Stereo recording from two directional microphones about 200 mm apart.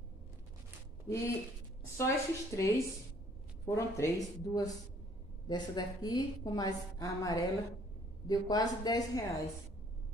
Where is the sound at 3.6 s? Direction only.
15° left (ahead or behind).